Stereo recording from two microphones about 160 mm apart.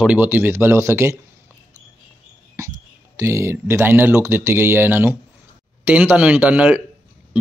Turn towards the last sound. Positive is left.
turn(degrees=-10)  # may be behind; listen again after turning